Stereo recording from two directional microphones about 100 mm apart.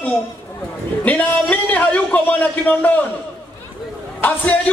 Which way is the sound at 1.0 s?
15° left (ahead or behind).